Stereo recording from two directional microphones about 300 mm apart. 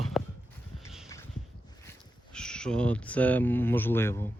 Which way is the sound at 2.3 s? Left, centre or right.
Centre.